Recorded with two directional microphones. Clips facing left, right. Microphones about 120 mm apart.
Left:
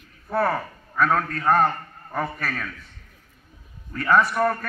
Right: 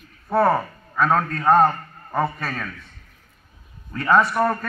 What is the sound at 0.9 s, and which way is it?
A man's voice, 25° right (ahead or behind).